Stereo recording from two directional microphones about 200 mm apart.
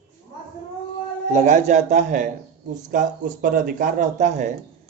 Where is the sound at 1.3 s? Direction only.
35° right (ahead or behind).